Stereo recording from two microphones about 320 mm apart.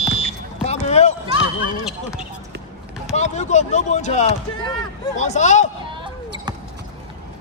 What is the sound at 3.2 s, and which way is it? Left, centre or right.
Speech, left.